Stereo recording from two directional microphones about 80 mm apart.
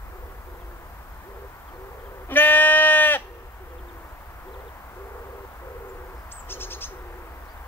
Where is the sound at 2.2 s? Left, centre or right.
Left.